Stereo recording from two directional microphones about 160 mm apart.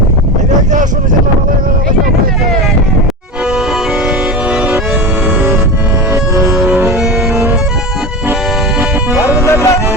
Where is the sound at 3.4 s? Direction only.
5° right (ahead or behind).